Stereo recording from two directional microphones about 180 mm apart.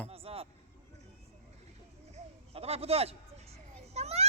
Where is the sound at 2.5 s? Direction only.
35° right (ahead or behind).